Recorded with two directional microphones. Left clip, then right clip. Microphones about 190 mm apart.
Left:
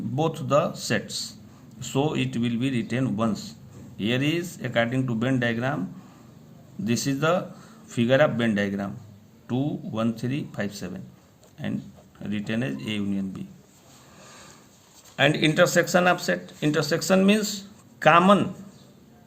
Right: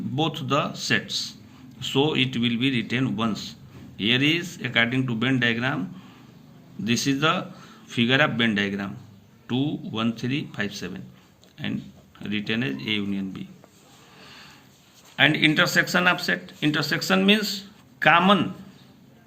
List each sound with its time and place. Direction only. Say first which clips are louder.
0.2 s a man's voice: left 2 dB; 40° left (ahead or behind)
6.8 s a man's voice: right 2 dB; 40° left (ahead or behind)
15.1 s a man's voice: right 2 dB; 40° left (ahead or behind)